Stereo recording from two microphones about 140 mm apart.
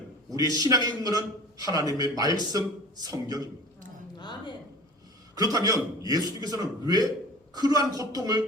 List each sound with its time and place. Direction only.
0.5 s a man's voice: 25° right (ahead or behind)
4.2 s speech: 30° left (ahead or behind)
5.4 s a man's voice: 25° right (ahead or behind)